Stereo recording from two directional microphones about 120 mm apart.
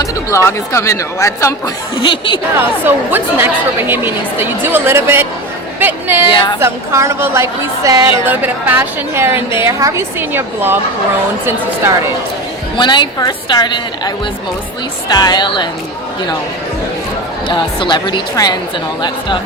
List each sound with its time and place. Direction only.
0.4 s a woman's voice: 25° left (ahead or behind)
2.0 s a woman's voice: 45° left (ahead or behind)
2.6 s a woman's voice: 15° right (ahead or behind)
8.3 s a woman's voice: 15° right (ahead or behind)
12.7 s a woman's voice: 40° left (ahead or behind)
15.1 s a woman's voice: 35° left (ahead or behind)
17.5 s a woman's voice: 40° left (ahead or behind)